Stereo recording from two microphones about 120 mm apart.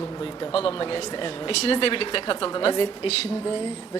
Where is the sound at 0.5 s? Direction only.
50° left (ahead or behind).